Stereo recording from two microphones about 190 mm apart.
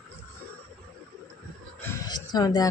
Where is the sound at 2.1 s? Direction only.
20° left (ahead or behind).